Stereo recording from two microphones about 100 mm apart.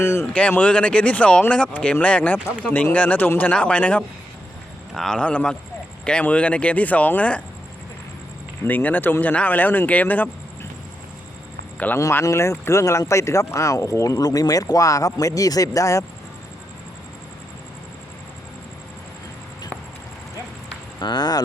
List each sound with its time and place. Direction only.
0.0 s speech: 25° left (ahead or behind)
0.3 s speech: 10° left (ahead or behind)
8.6 s speech: 20° left (ahead or behind)
11.9 s speech: 30° left (ahead or behind)
21.0 s speech: 45° left (ahead or behind)